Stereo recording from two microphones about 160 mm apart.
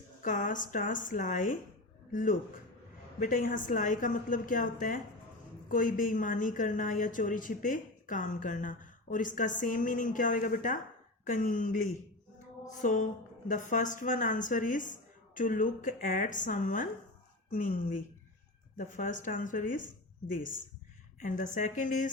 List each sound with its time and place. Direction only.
0.2 s a woman's voice: 55° left (ahead or behind)
12.6 s a sound: 50° left (ahead or behind)
13.5 s a woman's voice: 50° left (ahead or behind)
21.2 s a woman's voice: 55° left (ahead or behind)